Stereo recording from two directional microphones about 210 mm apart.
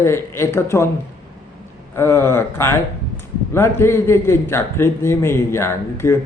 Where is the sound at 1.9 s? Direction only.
10° left (ahead or behind).